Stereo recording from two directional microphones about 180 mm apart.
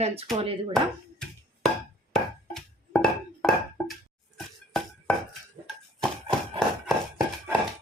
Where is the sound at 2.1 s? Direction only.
Centre (ahead or behind).